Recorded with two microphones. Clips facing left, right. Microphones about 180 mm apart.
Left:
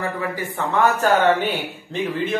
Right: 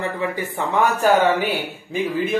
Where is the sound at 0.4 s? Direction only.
10° right (ahead or behind).